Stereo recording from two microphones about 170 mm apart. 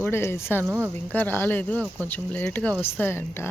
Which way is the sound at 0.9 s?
10° left (ahead or behind).